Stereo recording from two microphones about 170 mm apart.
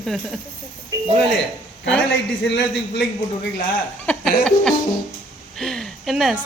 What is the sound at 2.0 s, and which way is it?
Speech, 90° left.